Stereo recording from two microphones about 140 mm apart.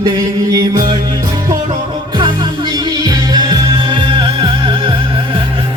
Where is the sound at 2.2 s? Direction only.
30° right (ahead or behind).